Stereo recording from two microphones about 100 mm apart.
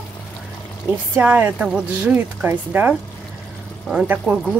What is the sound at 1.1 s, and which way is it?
Speech, 15° right (ahead or behind).